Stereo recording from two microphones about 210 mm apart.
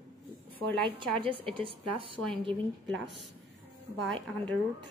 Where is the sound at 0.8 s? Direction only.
25° right (ahead or behind).